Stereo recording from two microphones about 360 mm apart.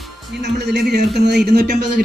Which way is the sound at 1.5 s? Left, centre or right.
Right.